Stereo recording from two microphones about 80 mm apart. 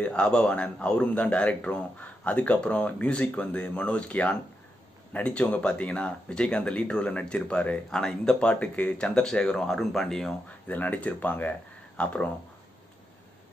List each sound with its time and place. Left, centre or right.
0.0 s a man's voice: centre
10.7 s a man's voice: centre